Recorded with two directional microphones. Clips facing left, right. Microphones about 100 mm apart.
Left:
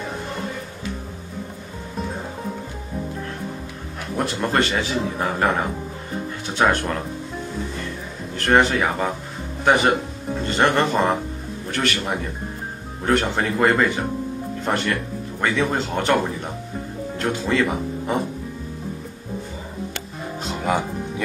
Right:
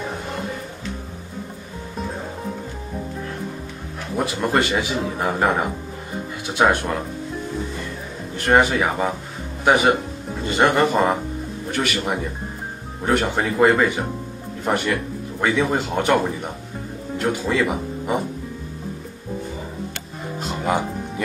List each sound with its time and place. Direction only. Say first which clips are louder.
4.2 s a man's voice: right 1 dB; 5° right (ahead or behind)
6.7 s a man's voice: right 1 dB; 10° right (ahead or behind)
8.4 s a man's voice: right 1 dB; 10° right (ahead or behind)
20.4 s music: right 1 dB; centre (ahead or behind)